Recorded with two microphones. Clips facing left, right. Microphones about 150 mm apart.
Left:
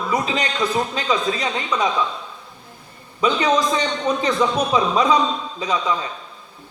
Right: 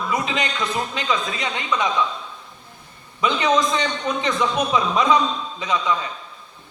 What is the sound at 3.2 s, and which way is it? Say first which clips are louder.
A man's voice: left 1 dB; 35° left (ahead or behind).